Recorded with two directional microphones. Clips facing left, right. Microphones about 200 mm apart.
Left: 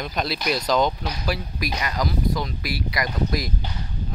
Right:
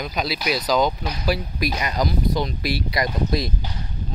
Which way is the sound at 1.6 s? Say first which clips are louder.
Right 3 dB; 25° right (ahead or behind).